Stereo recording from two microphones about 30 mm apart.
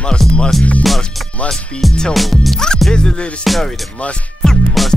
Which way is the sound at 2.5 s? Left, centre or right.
Left.